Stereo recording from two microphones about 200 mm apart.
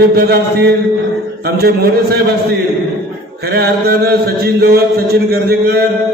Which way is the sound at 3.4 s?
50° right (ahead or behind).